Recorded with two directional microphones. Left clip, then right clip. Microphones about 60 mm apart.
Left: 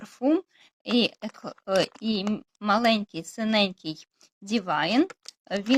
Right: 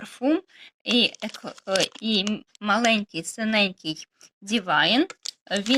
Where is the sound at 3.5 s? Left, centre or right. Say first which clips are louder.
Right 2 dB; centre.